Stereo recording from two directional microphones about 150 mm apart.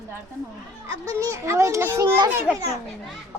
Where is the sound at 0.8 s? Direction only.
20° right (ahead or behind).